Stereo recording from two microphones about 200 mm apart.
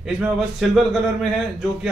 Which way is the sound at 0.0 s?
Centre (ahead or behind).